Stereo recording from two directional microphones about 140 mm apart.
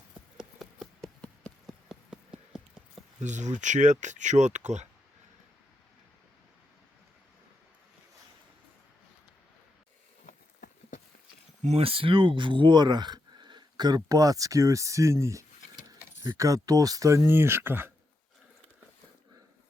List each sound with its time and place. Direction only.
0.3 s a sound: centre (ahead or behind)
1.9 s clip-clop: 5° right (ahead or behind)
3.2 s speech: 60° right (ahead or behind)
10.2 s horse: 70° left (ahead or behind)
11.6 s speech: 45° right (ahead or behind); by 17.9 s 15° right (ahead or behind)